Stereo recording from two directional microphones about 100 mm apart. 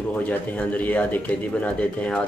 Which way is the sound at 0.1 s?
15° left (ahead or behind).